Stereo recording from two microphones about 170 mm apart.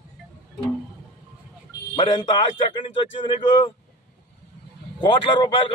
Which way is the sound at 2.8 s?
30° left (ahead or behind).